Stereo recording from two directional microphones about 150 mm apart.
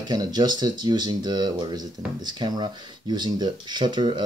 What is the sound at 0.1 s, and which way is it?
Speech, 25° right (ahead or behind).